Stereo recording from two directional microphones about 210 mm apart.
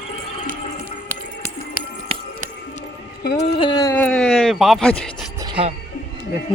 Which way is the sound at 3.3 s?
30° left (ahead or behind).